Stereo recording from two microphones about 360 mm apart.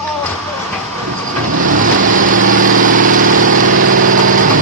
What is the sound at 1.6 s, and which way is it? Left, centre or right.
Vehicle, right.